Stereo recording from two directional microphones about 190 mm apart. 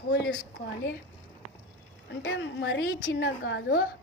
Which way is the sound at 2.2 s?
75° left (ahead or behind).